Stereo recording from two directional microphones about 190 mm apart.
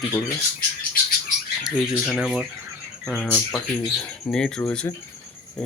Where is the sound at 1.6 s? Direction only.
Centre (ahead or behind).